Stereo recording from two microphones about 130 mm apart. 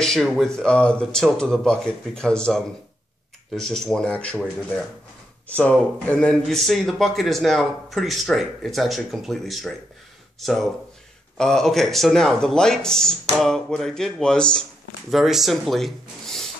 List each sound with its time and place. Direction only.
0.0 s speech: centre (ahead or behind)
5.5 s speech: 10° left (ahead or behind)